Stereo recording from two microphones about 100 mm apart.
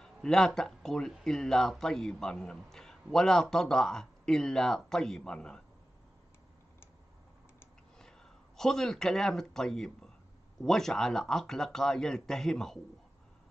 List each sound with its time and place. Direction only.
0.0 s a man's voice: 5° left (ahead or behind)
8.0 s a man's voice: 5° left (ahead or behind)